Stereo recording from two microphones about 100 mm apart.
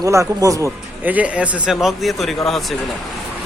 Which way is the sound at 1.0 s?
15° right (ahead or behind).